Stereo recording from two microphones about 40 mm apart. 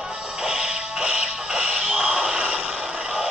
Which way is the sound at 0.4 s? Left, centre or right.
Centre.